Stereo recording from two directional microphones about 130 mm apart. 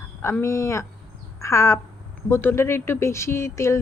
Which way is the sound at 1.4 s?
25° left (ahead or behind).